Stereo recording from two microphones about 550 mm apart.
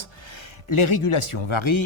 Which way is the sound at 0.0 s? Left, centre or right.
Left.